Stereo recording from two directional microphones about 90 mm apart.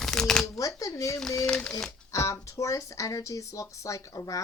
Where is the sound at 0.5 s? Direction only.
40° left (ahead or behind).